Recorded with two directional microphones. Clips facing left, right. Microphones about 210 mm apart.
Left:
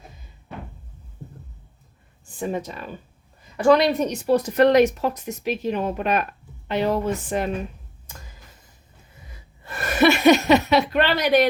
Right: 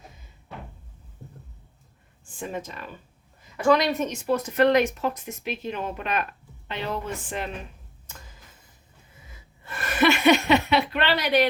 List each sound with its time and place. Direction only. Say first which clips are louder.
2.2 s a woman's voice: left 6 dB; 40° left (ahead or behind)
9.6 s speech: left 4 dB; 40° left (ahead or behind)